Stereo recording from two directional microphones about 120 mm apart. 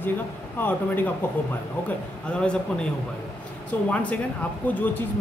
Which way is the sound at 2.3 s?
10° left (ahead or behind).